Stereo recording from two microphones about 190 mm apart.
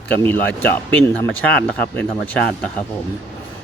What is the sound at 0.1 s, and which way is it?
Speech, 10° left (ahead or behind).